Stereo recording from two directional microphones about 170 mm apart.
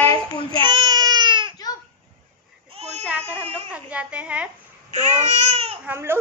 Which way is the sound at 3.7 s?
10° right (ahead or behind).